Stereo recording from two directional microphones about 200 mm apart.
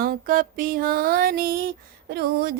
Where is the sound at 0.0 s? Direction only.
45° right (ahead or behind).